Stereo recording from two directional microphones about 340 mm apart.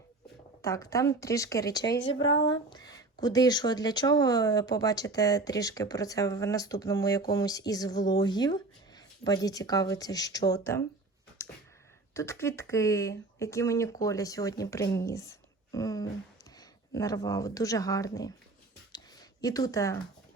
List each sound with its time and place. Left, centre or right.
0.6 s speech: centre
1.9 s speech: left
2.3 s speech: centre
11.4 s a sound: centre
12.1 s speech: centre
18.9 s a sound: centre